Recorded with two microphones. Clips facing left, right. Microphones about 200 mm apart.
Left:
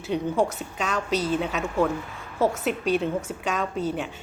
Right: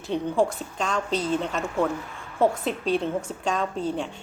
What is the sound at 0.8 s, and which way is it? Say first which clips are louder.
Speech: even; 5° left (ahead or behind).